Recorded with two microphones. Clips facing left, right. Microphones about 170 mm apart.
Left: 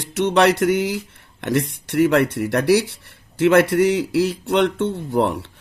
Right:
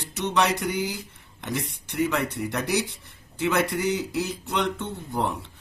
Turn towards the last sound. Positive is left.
turn(degrees=75)  # may be behind; listen again after turning